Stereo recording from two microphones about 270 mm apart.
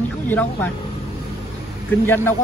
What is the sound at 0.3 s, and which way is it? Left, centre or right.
Speech, centre.